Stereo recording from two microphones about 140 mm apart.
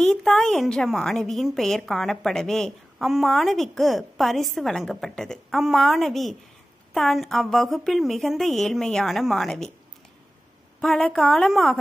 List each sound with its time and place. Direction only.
0.0 s a woman's voice: 5° left (ahead or behind)
10.8 s a woman's voice: 5° left (ahead or behind)